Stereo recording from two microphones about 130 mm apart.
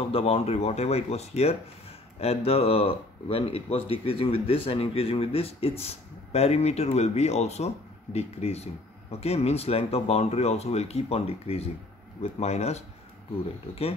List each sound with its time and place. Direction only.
0.1 s speech: 50° left (ahead or behind)